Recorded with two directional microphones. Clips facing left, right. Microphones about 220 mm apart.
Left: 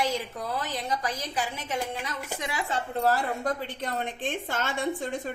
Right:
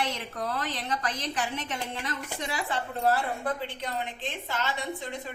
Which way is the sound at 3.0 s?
40° left (ahead or behind).